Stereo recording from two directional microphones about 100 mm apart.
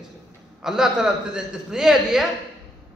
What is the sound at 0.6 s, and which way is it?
A man's voice, 5° right (ahead or behind).